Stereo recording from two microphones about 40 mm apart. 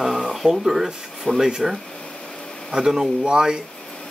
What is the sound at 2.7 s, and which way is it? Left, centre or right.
Speech, centre.